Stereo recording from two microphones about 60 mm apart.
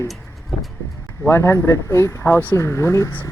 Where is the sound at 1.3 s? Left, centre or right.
Left.